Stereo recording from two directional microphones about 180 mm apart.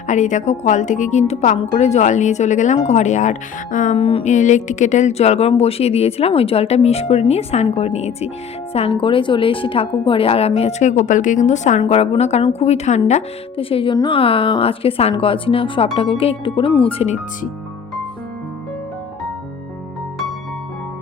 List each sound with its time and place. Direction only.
0.1 s speech: 45° left (ahead or behind)
3.9 s speech: 30° left (ahead or behind)